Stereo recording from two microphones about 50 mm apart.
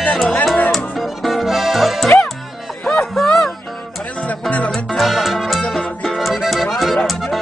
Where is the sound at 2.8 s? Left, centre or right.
Centre.